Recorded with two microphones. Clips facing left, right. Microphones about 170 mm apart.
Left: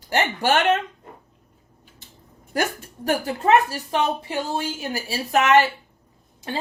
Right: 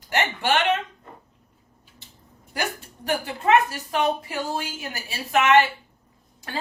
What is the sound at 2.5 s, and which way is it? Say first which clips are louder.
A woman's voice: left 5 dB; 40° left (ahead or behind).